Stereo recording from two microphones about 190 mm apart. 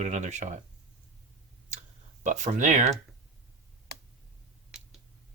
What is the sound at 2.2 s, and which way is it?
Speech, 40° right (ahead or behind).